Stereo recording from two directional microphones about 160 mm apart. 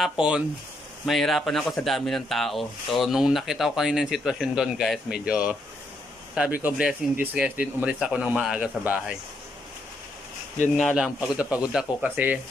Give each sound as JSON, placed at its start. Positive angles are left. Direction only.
{"t": 0.0, "sound": "speech", "side_deg": -5}
{"t": 10.8, "sound": "speech", "side_deg": 0}